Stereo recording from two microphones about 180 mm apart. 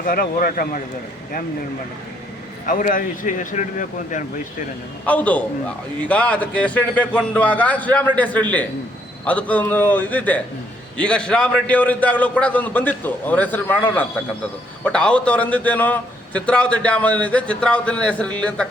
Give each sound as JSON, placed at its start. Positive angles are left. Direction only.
{"t": 0.0, "sound": "speech", "side_deg": 50}
{"t": 2.6, "sound": "speech", "side_deg": 50}
{"t": 5.0, "sound": "a man's voice", "side_deg": 10}